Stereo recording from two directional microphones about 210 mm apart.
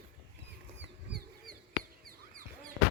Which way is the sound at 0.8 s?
50° right (ahead or behind).